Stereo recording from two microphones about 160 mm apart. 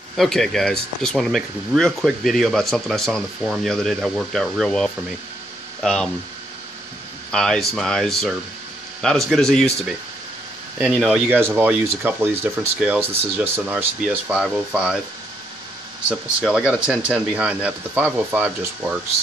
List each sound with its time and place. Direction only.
0.1 s speech: centre (ahead or behind)
7.2 s speech: 5° left (ahead or behind)
10.8 s speech: centre (ahead or behind)
11.2 s speech: 15° right (ahead or behind)
16.1 s speech: 5° right (ahead or behind)